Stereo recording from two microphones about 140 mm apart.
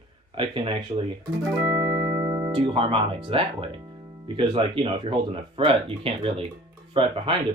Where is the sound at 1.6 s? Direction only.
15° right (ahead or behind).